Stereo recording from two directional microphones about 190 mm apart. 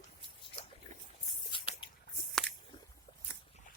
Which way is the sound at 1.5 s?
25° left (ahead or behind).